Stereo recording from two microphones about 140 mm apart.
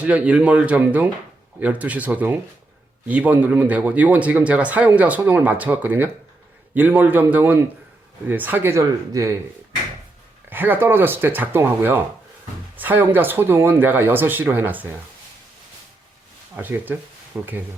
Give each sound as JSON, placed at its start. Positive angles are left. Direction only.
{"t": 0.0, "sound": "speech", "side_deg": -10}
{"t": 10.5, "sound": "speech", "side_deg": -15}
{"t": 16.6, "sound": "speech", "side_deg": -15}